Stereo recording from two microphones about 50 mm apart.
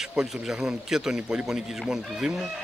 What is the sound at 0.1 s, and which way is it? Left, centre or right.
A man's voice, centre.